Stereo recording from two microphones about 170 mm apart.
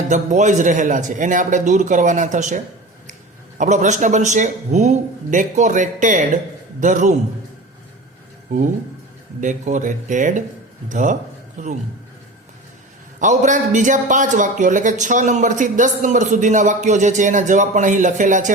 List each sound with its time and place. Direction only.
0.1 s a man's voice: 45° right (ahead or behind)
3.6 s a man's voice: 45° right (ahead or behind)
9.4 s a man's voice: 45° right (ahead or behind)
13.1 s a man's voice: 45° right (ahead or behind)